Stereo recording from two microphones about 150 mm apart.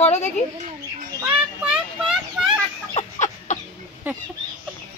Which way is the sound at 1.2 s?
10° right (ahead or behind).